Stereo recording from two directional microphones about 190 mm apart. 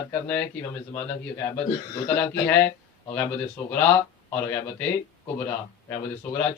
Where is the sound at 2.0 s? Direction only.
10° left (ahead or behind).